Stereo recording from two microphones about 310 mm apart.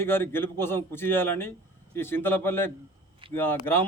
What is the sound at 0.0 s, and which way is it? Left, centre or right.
Speech, centre.